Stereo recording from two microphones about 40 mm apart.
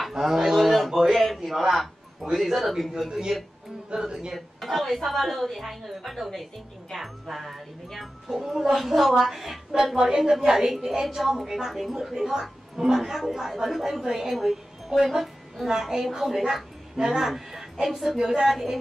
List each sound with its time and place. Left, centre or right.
0.1 s a sound: centre
2.3 s a woman's voice: centre
3.3 s a woman's voice: centre
4.3 s a woman's voice: centre
8.3 s a woman's voice: centre
9.9 s a woman's voice: centre